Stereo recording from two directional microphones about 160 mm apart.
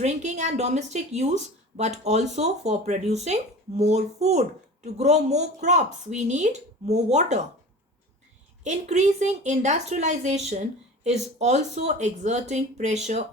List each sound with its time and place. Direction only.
0.0 s a woman's voice: 45° right (ahead or behind)
8.6 s a woman's voice: 45° right (ahead or behind)